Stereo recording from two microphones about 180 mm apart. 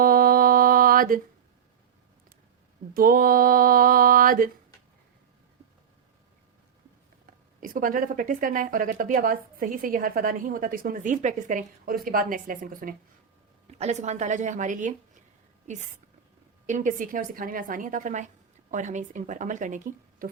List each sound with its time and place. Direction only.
0.0 s mantra: 55° right (ahead or behind)
2.9 s speech: 55° right (ahead or behind)
7.3 s speech: 50° right (ahead or behind)
13.7 s a woman's voice: 35° right (ahead or behind)